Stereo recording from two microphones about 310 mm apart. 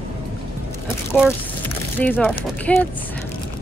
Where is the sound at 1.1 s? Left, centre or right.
Centre.